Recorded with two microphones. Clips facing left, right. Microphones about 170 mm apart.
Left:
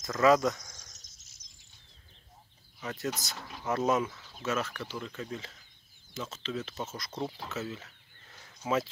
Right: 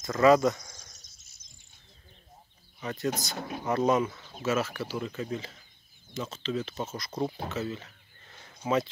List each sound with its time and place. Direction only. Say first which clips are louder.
0.0 s speech: right 3 dB; centre (ahead or behind)
2.8 s speech: right 3 dB; centre (ahead or behind)
3.3 s speech: right 9 dB; 55° right (ahead or behind)
3.6 s speech: right 3 dB; centre (ahead or behind)
7.4 s a sound: right 4 dB; centre (ahead or behind)